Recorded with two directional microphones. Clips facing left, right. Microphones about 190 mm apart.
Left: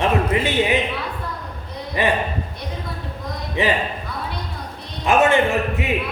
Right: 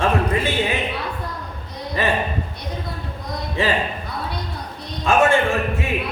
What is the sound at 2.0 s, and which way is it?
Speech, 15° left (ahead or behind).